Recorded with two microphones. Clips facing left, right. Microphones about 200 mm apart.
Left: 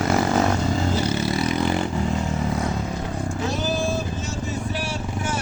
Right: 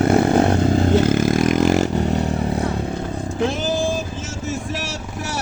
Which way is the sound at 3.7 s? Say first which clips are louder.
Right 3 dB; 90° right.